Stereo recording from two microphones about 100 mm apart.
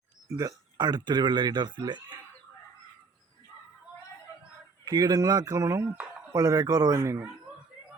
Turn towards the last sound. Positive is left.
turn(degrees=-30)  # may be behind; listen again after turning